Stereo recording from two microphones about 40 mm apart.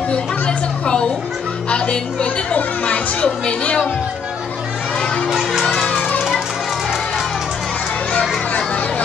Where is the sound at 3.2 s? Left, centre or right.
Left.